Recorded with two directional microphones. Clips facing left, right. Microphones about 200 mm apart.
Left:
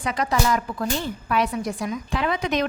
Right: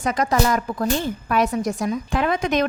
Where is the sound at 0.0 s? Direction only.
45° right (ahead or behind).